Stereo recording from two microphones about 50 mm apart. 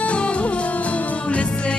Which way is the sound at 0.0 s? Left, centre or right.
Left.